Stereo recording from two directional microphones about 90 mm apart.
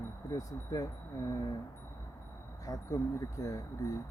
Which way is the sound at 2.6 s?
40° left (ahead or behind).